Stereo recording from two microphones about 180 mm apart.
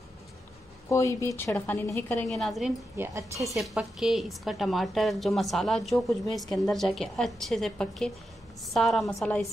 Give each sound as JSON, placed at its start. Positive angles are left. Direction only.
{"t": 0.8, "sound": "a woman's voice", "side_deg": 15}
{"t": 3.0, "sound": "a woman's voice", "side_deg": -15}
{"t": 3.4, "sound": "a woman's voice", "side_deg": 0}